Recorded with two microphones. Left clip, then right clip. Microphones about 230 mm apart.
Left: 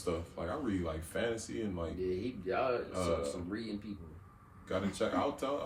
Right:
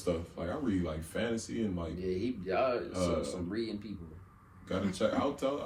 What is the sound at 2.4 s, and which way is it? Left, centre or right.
Speech, centre.